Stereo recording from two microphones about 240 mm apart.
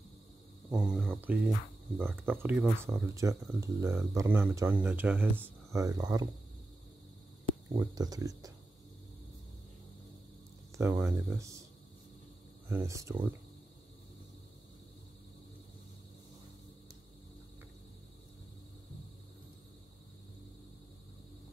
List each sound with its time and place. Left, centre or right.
0.7 s speech: centre
7.7 s speech: centre
10.8 s speech: centre
12.6 s speech: centre